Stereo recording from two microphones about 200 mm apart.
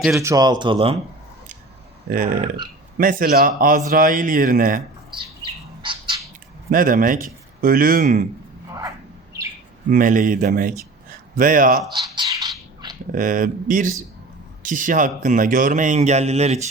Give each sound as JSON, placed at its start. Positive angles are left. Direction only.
{"t": 0.1, "sound": "speech", "side_deg": -15}
{"t": 2.0, "sound": "speech", "side_deg": -45}
{"t": 5.8, "sound": "bird", "side_deg": -25}
{"t": 6.7, "sound": "speech", "side_deg": -45}
{"t": 9.9, "sound": "speech", "side_deg": -40}
{"t": 11.9, "sound": "a sound", "side_deg": -25}
{"t": 13.1, "sound": "speech", "side_deg": -40}